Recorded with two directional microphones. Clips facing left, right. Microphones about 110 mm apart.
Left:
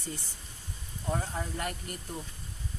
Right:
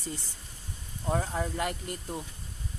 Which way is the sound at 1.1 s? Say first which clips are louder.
Right 4 dB; 25° right (ahead or behind).